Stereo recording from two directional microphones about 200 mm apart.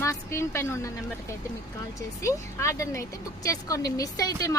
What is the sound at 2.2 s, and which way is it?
Speech, 15° left (ahead or behind).